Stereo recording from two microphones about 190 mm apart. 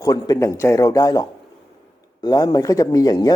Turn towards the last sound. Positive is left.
turn(degrees=20)  # may be behind; listen again after turning